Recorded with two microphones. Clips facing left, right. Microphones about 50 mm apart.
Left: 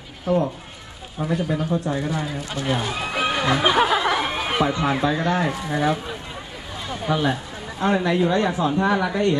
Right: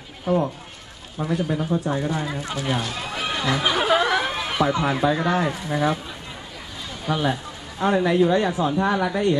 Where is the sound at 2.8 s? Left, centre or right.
Centre.